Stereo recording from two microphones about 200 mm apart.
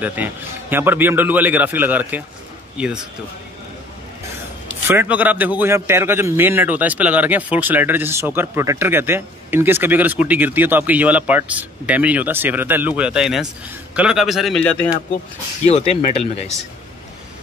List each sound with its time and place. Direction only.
0.0 s a man's voice: 10° right (ahead or behind)
4.8 s a man's voice: 10° right (ahead or behind)
15.6 s speech: 30° left (ahead or behind)